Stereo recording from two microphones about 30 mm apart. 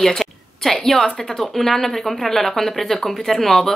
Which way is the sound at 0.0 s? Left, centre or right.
Centre.